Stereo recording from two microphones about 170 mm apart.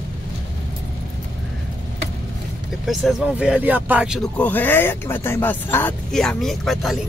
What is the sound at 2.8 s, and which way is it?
Speech, 5° right (ahead or behind).